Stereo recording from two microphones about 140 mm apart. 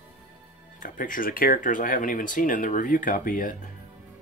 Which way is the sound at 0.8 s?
70° left (ahead or behind).